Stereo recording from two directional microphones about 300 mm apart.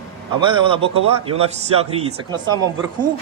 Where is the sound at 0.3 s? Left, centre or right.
Centre.